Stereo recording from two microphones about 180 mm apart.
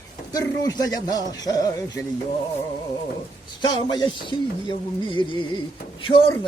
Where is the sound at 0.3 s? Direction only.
20° left (ahead or behind).